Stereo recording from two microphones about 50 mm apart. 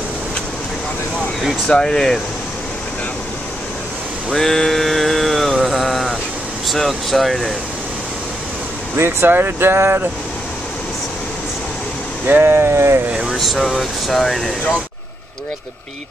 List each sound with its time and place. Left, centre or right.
1.7 s speech: centre
4.3 s mantra: centre
6.7 s speech: centre
8.9 s speech: right
12.3 s speech: right
12.5 s speech: right
13.3 s speech: centre